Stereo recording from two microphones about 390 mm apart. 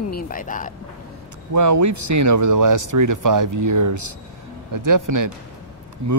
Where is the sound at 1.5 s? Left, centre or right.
Right.